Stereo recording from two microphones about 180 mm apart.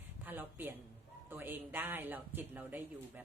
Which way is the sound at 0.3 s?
10° right (ahead or behind).